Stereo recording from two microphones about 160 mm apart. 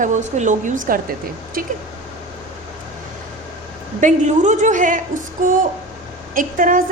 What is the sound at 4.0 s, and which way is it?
A woman's voice, 50° right (ahead or behind).